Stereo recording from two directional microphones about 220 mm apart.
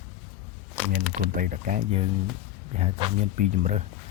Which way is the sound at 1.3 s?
35° right (ahead or behind).